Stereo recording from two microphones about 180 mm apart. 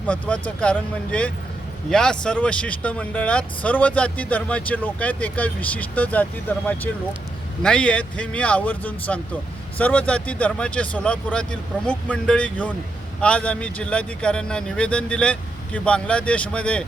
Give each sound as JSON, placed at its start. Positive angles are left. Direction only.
{"t": 0.1, "sound": "speech", "side_deg": 10}